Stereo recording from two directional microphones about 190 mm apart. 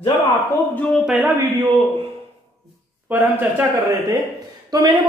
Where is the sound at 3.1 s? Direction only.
10° right (ahead or behind).